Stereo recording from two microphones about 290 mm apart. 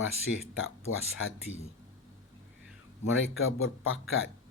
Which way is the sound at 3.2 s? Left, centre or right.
Left.